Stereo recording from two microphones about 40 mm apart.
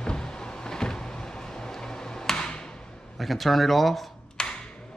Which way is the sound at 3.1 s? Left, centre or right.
Centre.